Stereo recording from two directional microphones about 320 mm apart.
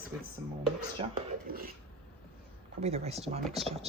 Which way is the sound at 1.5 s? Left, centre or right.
Right.